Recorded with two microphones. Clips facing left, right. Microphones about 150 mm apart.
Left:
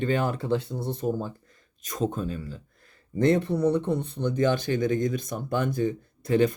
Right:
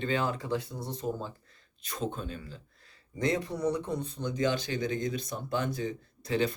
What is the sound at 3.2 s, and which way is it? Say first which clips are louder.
Speech: left 8 dB; 60° left (ahead or behind).